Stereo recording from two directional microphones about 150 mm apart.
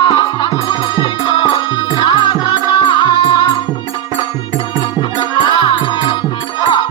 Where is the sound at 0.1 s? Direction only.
30° left (ahead or behind).